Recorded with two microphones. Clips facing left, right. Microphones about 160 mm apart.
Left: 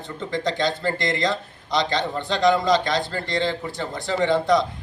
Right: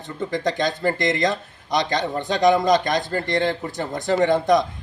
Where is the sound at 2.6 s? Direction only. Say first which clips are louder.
Right 2 dB; 45° right (ahead or behind).